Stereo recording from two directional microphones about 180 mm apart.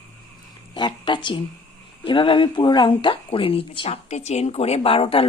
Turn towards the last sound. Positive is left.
turn(degrees=30)  # may be behind; listen again after turning